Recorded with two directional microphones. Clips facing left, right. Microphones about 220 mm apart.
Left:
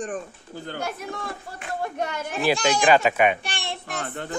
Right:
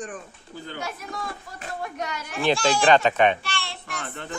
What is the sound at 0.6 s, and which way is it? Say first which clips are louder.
Speech: left 3 dB; 55° left (ahead or behind).